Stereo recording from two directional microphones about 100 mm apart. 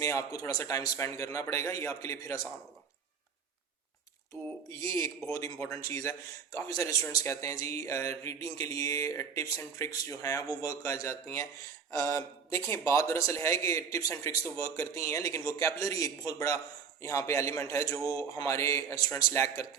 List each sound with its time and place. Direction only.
0.0 s a man's voice: 35° left (ahead or behind)
4.8 s a man's voice: 30° left (ahead or behind)